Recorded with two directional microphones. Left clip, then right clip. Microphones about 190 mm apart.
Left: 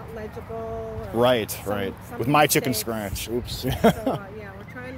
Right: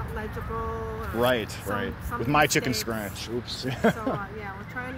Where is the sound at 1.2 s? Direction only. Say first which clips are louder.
Left 4 dB; 30° left (ahead or behind).